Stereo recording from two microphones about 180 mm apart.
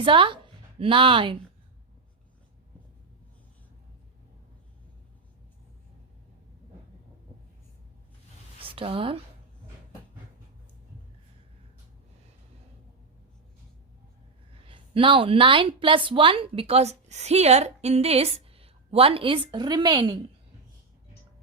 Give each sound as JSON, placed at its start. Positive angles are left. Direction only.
{"t": 0.0, "sound": "a woman's voice", "side_deg": -25}
{"t": 8.6, "sound": "speech", "side_deg": -30}
{"t": 14.6, "sound": "a woman's voice", "side_deg": -30}